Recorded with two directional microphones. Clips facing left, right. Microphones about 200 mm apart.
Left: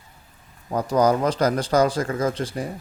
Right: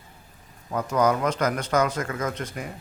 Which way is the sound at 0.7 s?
35° left (ahead or behind).